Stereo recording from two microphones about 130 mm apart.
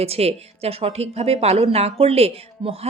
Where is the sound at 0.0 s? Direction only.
50° right (ahead or behind).